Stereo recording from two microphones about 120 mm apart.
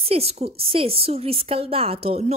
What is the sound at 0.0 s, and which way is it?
A woman's voice, 55° right (ahead or behind).